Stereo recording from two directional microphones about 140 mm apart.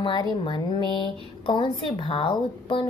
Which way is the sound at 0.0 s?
35° left (ahead or behind).